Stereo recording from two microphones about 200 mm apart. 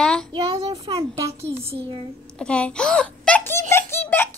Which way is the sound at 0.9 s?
15° right (ahead or behind).